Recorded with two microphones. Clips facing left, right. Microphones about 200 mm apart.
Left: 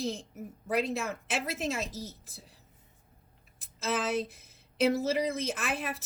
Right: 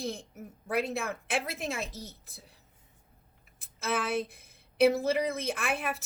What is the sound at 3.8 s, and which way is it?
A woman's voice, 60° right (ahead or behind).